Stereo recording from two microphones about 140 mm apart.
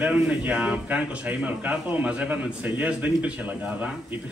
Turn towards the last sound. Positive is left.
turn(degrees=-10)  # may be behind; listen again after turning